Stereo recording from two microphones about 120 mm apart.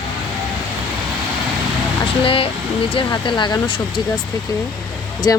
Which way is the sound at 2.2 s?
50° left (ahead or behind).